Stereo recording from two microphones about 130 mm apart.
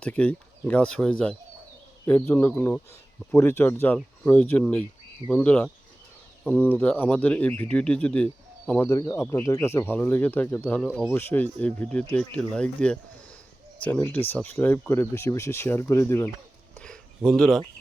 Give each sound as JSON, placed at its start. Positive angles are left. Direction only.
{"t": 0.0, "sound": "speech", "side_deg": 10}
{"t": 8.9, "sound": "speech", "side_deg": 25}
{"t": 16.7, "sound": "a sound", "side_deg": 5}